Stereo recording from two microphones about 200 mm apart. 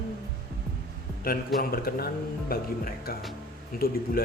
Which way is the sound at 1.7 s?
50° left (ahead or behind).